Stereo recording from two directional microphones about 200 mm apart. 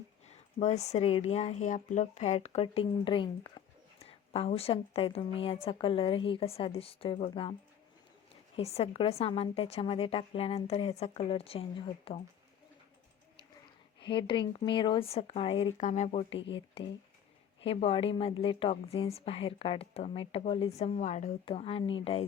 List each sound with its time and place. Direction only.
0.3 s a woman's voice: 35° left (ahead or behind)
8.5 s a woman's voice: 30° left (ahead or behind)
14.0 s a woman's voice: 25° left (ahead or behind)